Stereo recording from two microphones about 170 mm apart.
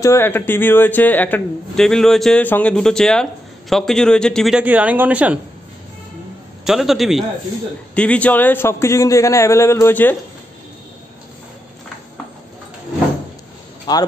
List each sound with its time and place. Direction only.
0.0 s a man's voice: 15° left (ahead or behind); by 5.4 s 10° right (ahead or behind)
6.6 s a man's voice: centre (ahead or behind)
13.9 s speech: 25° left (ahead or behind)